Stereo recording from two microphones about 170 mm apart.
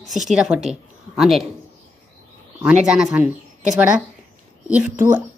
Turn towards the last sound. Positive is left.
turn(degrees=-10)  # may be behind; listen again after turning